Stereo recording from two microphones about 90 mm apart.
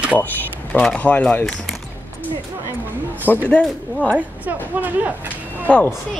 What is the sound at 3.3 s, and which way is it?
Speech, 20° left (ahead or behind).